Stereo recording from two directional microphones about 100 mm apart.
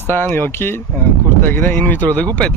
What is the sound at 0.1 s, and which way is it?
Speech, 20° left (ahead or behind).